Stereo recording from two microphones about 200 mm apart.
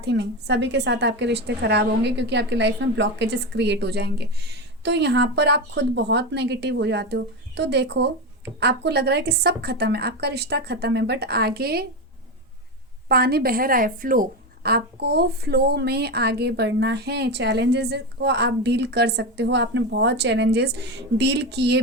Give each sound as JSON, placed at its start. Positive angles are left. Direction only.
{"t": 0.0, "sound": "a woman's voice", "side_deg": -60}
{"t": 13.1, "sound": "a woman's voice", "side_deg": -50}